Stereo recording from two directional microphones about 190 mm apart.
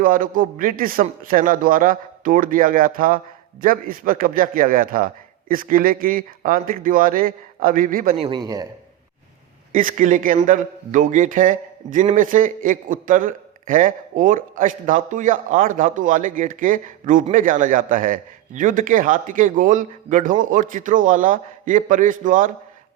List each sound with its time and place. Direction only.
0.0 s a man's voice: 45° right (ahead or behind)
8.1 s a man's voice: 30° right (ahead or behind)
8.4 s a man's voice: 20° right (ahead or behind)
9.7 s a man's voice: 45° right (ahead or behind)